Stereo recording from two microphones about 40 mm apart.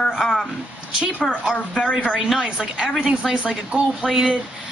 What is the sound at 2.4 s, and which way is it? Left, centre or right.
Speech, right.